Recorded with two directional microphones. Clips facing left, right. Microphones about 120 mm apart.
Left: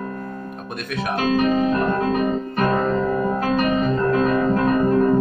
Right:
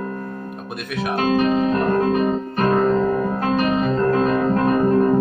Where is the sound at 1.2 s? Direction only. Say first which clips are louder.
Right 1 dB; 35° right (ahead or behind).